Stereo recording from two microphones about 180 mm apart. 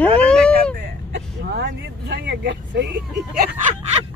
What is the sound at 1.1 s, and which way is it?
Speech, 70° right (ahead or behind).